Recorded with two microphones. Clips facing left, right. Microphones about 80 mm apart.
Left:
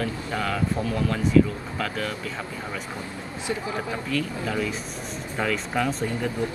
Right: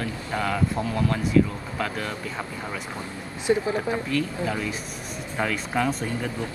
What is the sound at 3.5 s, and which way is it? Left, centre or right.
Speech, right.